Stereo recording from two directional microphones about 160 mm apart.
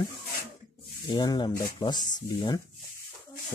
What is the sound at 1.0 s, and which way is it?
Speech, 25° left (ahead or behind).